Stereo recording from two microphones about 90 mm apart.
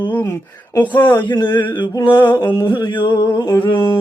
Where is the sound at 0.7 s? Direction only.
20° left (ahead or behind).